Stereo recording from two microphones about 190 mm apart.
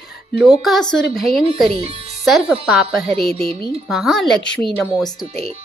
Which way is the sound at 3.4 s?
30° right (ahead or behind).